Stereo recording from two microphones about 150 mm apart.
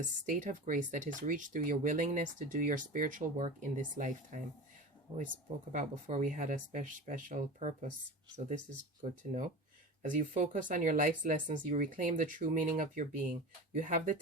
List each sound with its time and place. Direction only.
0.0 s speech: 55° right (ahead or behind)
5.1 s speech: 35° right (ahead or behind)
5.7 s speech: 55° right (ahead or behind)
9.0 s speech: 55° right (ahead or behind)